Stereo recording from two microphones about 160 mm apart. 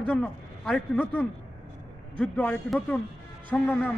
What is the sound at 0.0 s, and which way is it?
A man's voice, 10° left (ahead or behind).